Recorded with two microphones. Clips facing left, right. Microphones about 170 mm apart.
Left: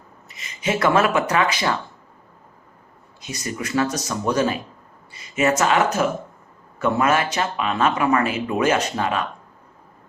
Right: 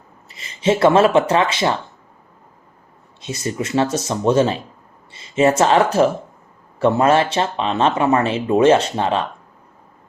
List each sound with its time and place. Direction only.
0.3 s speech: 30° right (ahead or behind)
3.2 s speech: 25° right (ahead or behind)